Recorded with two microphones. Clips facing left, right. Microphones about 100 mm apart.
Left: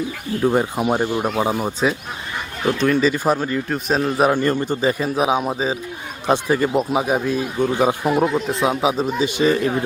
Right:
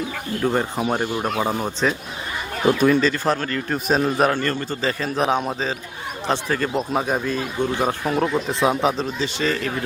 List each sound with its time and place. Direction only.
0.4 s speech: 10° left (ahead or behind)
2.7 s a man's voice: 5° right (ahead or behind)
3.0 s speech: 10° left (ahead or behind)
3.7 s a man's voice: centre (ahead or behind)
4.3 s a man's voice: 15° left (ahead or behind)